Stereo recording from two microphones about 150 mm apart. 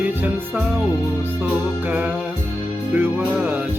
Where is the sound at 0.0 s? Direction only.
10° right (ahead or behind).